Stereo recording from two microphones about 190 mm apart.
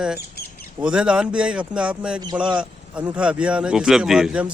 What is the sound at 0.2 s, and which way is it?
Bird, 55° left (ahead or behind).